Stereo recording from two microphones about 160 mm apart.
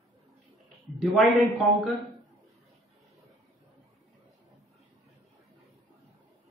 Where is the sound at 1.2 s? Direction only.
Centre (ahead or behind).